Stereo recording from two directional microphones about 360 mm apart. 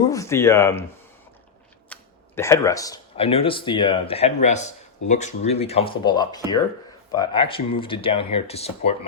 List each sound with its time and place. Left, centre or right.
0.1 s speech: centre
1.9 s speech: centre